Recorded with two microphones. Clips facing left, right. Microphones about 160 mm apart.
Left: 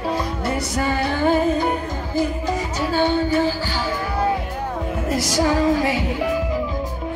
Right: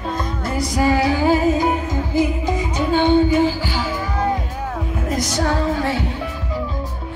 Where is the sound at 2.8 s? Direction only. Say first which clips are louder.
Right 5 dB; 20° right (ahead or behind).